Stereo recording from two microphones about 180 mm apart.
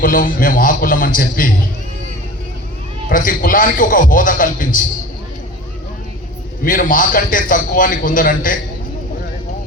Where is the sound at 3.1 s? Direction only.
50° left (ahead or behind).